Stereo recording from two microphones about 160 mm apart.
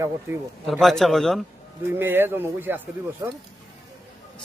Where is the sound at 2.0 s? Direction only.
15° right (ahead or behind).